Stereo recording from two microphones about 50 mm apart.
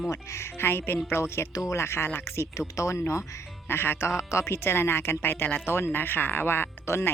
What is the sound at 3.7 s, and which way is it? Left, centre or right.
Speech, left.